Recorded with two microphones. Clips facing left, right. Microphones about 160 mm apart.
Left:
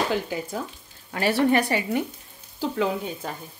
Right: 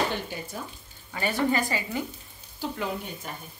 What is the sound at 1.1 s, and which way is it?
Speech, 75° left (ahead or behind).